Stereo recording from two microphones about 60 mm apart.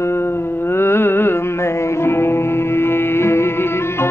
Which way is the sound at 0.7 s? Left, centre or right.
Left.